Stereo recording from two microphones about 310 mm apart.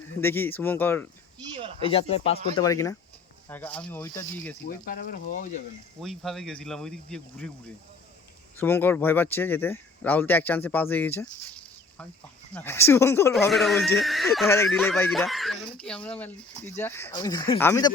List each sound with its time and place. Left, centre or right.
0.2 s speech: centre
1.8 s speech: centre
4.6 s speech: left
6.0 s speech: centre
8.5 s speech: centre